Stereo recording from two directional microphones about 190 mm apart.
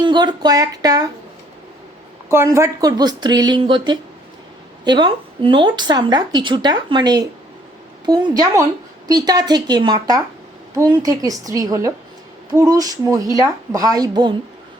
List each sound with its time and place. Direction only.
0.0 s speech: 25° right (ahead or behind)
2.3 s a woman's voice: 15° right (ahead or behind)